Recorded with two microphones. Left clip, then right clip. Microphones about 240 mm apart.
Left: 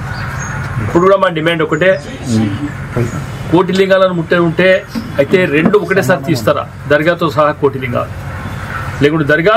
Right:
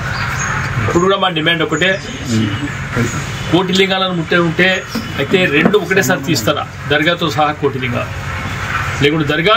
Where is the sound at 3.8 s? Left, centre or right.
Left.